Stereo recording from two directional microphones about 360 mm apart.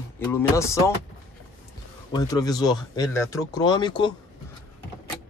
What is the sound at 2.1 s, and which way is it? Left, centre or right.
Speech, centre.